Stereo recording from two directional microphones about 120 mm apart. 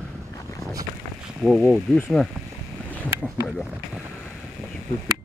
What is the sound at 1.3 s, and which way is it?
Speech, 10° right (ahead or behind).